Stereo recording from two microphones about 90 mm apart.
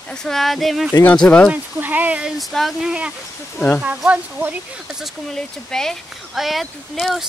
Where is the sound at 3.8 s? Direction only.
15° right (ahead or behind).